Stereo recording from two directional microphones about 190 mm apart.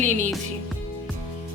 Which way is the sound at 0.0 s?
40° right (ahead or behind).